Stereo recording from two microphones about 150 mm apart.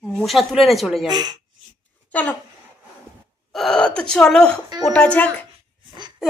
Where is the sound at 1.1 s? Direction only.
25° right (ahead or behind).